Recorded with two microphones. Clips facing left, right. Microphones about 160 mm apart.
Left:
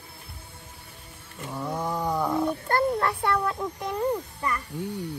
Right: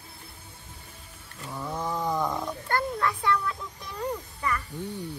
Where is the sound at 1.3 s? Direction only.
15° left (ahead or behind).